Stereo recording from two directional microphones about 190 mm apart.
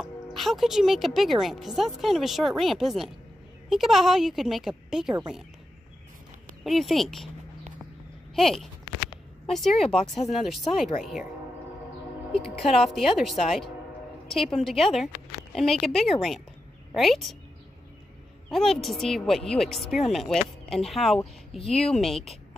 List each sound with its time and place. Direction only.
0.0 s speech: centre (ahead or behind)
6.6 s speech: centre (ahead or behind)
8.4 s speech: centre (ahead or behind)
9.8 s speech: 35° left (ahead or behind)
10.3 s speech: centre (ahead or behind)
12.4 s speech: centre (ahead or behind)
18.5 s speech: centre (ahead or behind)